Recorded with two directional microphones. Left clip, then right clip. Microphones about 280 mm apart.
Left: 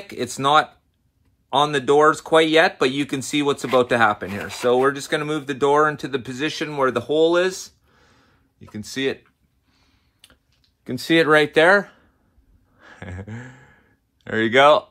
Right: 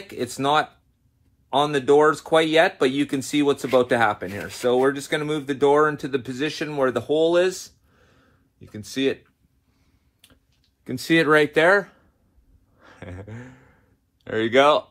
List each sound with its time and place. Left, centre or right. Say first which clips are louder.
0.0 s speech: left 3 dB; left
10.8 s speech: left 2 dB; left
12.7 s a sound: left 2 dB; left
14.2 s speech: left 3 dB; left